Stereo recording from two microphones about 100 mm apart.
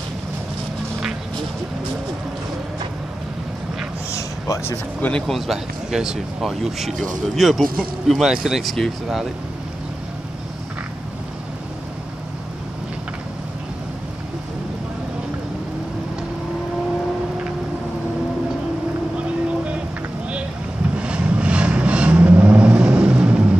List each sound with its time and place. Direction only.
4.1 s a sound: 30° left (ahead or behind)
5.2 s speech: centre (ahead or behind)
19.1 s vehicle: 10° right (ahead or behind)
20.9 s vehicle: 10° right (ahead or behind)